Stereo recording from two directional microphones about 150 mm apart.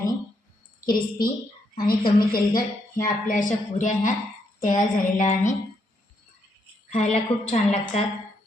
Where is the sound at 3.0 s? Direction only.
60° left (ahead or behind).